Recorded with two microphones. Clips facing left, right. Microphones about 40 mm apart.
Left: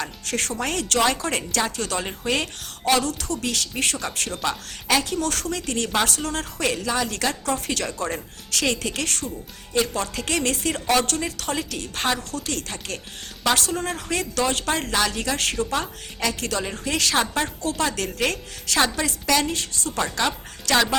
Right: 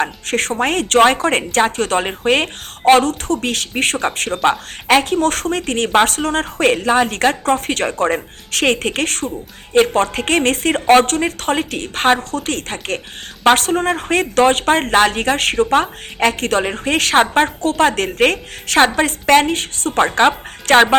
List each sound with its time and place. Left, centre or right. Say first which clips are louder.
0.0 s a woman's voice: right 9 dB; right